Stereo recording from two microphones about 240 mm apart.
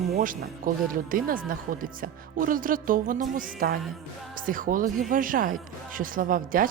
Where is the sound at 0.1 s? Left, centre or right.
Right.